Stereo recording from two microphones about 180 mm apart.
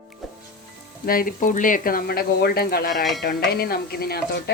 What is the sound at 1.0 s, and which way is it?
Speech, 55° left (ahead or behind).